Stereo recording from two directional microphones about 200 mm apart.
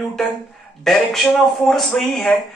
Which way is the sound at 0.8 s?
Centre (ahead or behind).